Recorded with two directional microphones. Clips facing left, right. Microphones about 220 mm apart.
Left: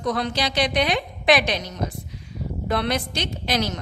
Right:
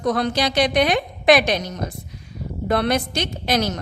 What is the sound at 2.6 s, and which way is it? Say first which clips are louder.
A woman's voice: right 4 dB; 50° right (ahead or behind).